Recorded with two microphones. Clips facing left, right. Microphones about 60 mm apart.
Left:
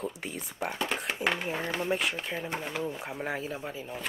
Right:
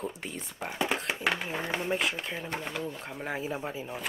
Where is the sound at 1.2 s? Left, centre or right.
Centre.